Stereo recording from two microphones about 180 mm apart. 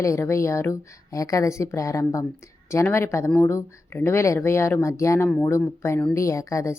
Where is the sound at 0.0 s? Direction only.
15° left (ahead or behind).